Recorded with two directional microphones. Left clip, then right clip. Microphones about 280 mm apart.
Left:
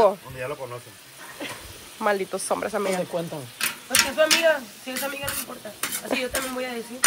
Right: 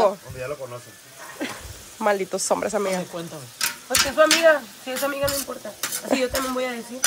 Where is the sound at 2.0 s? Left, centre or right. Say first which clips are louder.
Right 2 dB; centre.